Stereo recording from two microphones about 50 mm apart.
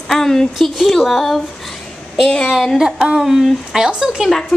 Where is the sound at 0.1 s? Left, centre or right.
Centre.